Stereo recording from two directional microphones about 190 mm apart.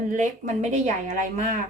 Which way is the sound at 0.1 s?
40° right (ahead or behind).